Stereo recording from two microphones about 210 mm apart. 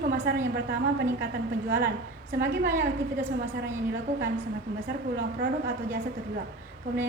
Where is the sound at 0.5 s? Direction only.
50° right (ahead or behind).